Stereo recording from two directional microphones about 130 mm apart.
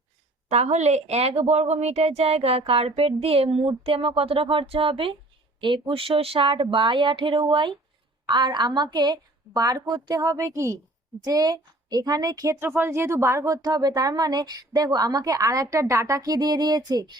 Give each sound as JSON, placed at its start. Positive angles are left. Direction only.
{"t": 0.5, "sound": "a woman's voice", "side_deg": -60}